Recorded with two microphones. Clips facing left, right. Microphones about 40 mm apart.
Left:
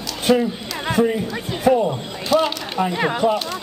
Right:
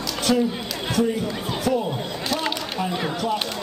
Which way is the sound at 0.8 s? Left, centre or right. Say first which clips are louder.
Left 4 dB; left.